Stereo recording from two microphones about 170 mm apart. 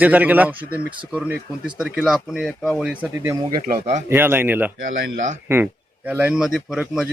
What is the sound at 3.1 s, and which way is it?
Speech, 15° right (ahead or behind).